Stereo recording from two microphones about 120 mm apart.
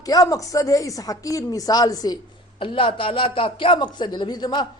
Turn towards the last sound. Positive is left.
turn(degrees=40)  # may be behind; listen again after turning